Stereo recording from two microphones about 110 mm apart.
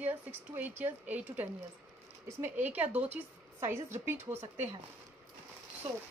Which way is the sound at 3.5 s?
25° right (ahead or behind).